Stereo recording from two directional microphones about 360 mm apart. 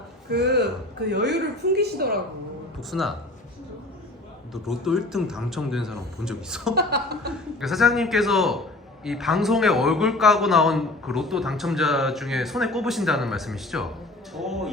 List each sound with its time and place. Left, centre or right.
0.3 s a woman's voice: right
2.9 s a man's voice: centre
4.5 s a man's voice: centre
6.7 s a woman's voice: right
7.6 s a man's voice: centre